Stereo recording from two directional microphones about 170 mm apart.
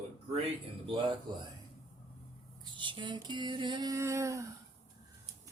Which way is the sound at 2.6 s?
30° right (ahead or behind).